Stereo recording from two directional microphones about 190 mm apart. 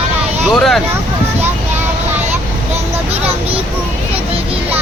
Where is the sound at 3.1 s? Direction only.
30° right (ahead or behind).